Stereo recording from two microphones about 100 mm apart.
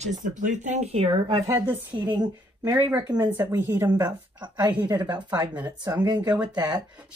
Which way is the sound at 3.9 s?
40° right (ahead or behind).